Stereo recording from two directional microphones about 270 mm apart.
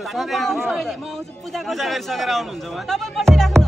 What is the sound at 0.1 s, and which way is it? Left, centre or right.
Speech, centre.